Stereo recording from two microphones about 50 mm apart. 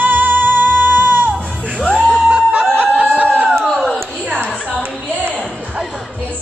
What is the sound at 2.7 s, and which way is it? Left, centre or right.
Snicker, right.